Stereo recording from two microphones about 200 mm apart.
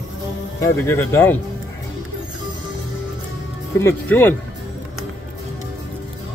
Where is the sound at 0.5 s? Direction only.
15° left (ahead or behind).